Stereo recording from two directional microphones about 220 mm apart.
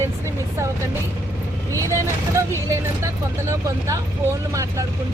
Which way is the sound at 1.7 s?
15° right (ahead or behind).